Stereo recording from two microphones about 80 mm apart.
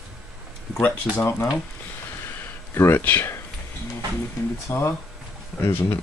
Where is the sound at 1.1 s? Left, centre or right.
Left.